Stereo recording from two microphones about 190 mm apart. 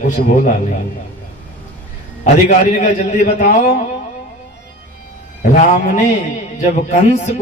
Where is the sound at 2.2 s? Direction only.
40° left (ahead or behind).